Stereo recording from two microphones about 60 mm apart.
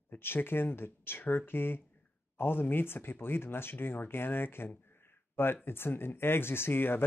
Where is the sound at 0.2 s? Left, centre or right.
Left.